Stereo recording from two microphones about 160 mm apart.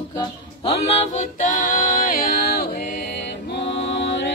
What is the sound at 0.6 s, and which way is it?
Music, 40° left (ahead or behind).